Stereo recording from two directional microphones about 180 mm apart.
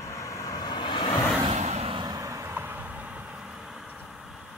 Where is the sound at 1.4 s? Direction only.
40° right (ahead or behind).